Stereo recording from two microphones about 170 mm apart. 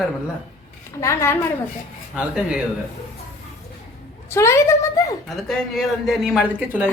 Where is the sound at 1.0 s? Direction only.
15° left (ahead or behind).